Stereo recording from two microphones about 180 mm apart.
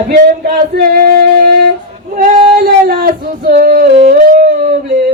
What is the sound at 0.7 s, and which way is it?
Music, 55° right (ahead or behind).